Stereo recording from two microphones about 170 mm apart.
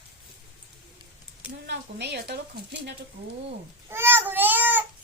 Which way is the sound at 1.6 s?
90° right.